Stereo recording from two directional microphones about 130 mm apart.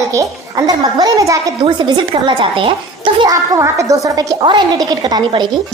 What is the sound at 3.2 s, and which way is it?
A child's voice, 25° right (ahead or behind).